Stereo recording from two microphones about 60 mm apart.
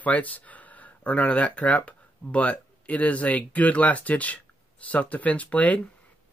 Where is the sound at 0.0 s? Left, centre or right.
Left.